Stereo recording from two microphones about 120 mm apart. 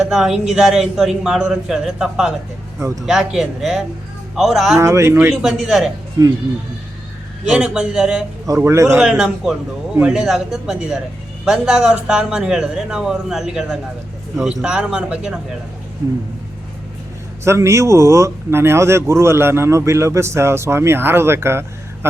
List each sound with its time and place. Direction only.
0.1 s speech: 5° right (ahead or behind)
2.7 s speech: 25° right (ahead or behind)
3.1 s speech: 5° right (ahead or behind)
4.8 s a man's voice: 25° right (ahead or behind)
5.3 s speech: 5° right (ahead or behind)
7.4 s a man's voice: 5° right (ahead or behind)
8.4 s a man's voice: 25° right (ahead or behind)
9.0 s a man's voice: 5° right (ahead or behind)
17.4 s a man's voice: 25° right (ahead or behind)